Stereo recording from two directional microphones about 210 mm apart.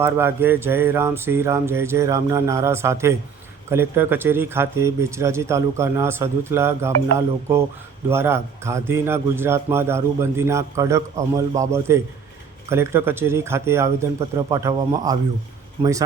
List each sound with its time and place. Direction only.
0.0 s speech: 10° right (ahead or behind)